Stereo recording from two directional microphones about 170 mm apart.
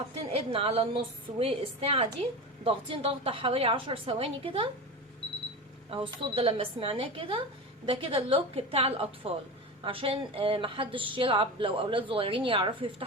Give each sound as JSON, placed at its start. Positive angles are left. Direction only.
{"t": 0.3, "sound": "a woman's voice", "side_deg": -35}
{"t": 5.9, "sound": "a woman's voice", "side_deg": -30}